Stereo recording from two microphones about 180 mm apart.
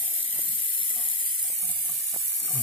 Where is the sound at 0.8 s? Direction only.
30° left (ahead or behind).